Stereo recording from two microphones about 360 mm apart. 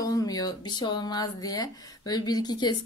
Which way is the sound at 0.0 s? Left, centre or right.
Centre.